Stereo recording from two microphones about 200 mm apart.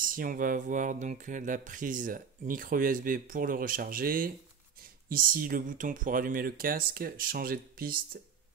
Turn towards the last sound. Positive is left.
turn(degrees=-45)  # may be behind; listen again after turning